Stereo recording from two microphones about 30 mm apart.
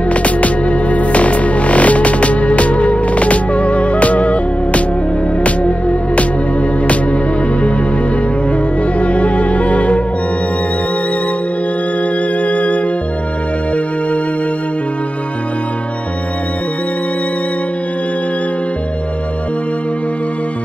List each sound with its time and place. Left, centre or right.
0.1 s music: left
9.0 s music: left
12.4 s music: left